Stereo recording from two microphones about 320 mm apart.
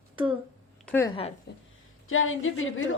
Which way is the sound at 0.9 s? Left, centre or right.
Centre.